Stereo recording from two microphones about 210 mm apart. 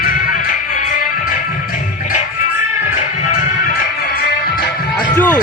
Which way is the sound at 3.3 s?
45° left (ahead or behind).